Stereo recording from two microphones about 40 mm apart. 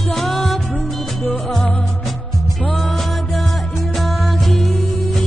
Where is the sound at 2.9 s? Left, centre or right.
Centre.